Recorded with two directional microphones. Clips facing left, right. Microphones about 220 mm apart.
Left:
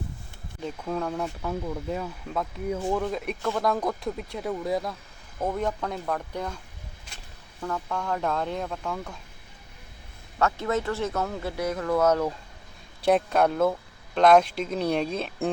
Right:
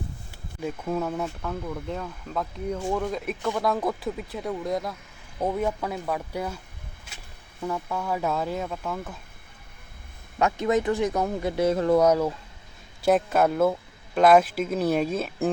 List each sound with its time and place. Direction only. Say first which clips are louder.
0.6 s speech: right 2 dB; 10° right (ahead or behind)
1.4 s speech: left 1 dB; 10° left (ahead or behind)
5.4 s speech: right 2 dB; 10° right (ahead or behind)
7.6 s speech: right 1 dB; 10° right (ahead or behind)
10.3 s speech: right 3 dB; 15° right (ahead or behind)
11.9 s speech: right 2 dB; 10° right (ahead or behind)